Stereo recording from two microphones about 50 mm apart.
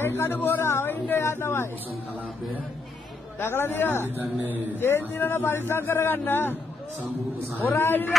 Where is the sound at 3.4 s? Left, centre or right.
Left.